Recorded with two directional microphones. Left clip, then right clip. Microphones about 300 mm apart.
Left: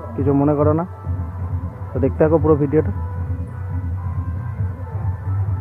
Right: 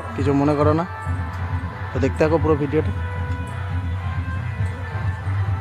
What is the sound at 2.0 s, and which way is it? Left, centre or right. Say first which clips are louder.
Speech: left 3 dB; centre.